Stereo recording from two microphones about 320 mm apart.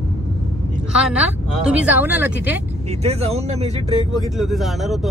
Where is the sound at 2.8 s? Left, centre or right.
Centre.